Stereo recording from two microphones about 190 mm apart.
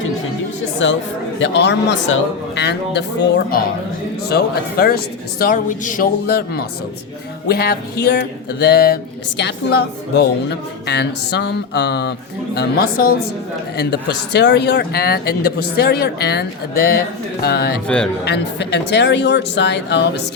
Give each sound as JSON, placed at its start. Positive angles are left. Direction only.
{"t": 0.8, "sound": "speech", "side_deg": 75}
{"t": 1.4, "sound": "speech", "side_deg": 65}
{"t": 5.4, "sound": "speech", "side_deg": 45}
{"t": 12.5, "sound": "speech", "side_deg": 50}
{"t": 17.8, "sound": "speech", "side_deg": 5}
{"t": 18.3, "sound": "speech", "side_deg": 60}